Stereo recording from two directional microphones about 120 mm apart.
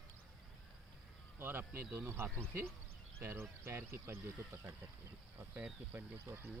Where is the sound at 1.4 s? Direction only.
20° right (ahead or behind).